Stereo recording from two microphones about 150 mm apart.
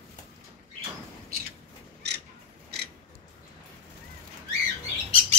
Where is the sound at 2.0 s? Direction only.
90° right.